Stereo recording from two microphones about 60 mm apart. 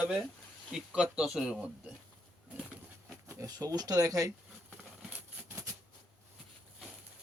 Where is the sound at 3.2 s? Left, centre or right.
Right.